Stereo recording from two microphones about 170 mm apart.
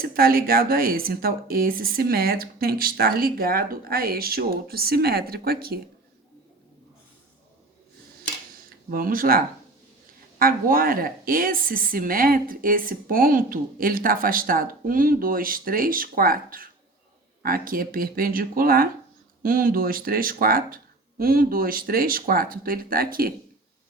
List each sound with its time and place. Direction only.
0.0 s a woman's voice: 60° right (ahead or behind)
8.9 s a woman's voice: 55° right (ahead or behind)